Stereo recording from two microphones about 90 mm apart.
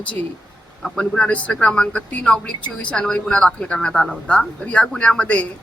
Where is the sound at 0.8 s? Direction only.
10° left (ahead or behind).